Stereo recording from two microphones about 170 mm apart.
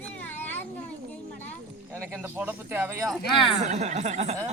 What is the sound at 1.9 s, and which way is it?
Speech, 10° right (ahead or behind).